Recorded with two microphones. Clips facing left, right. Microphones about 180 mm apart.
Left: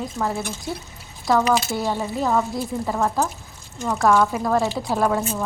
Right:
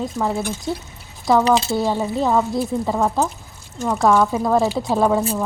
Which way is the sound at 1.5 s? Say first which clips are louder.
Right 4 dB; 30° right (ahead or behind).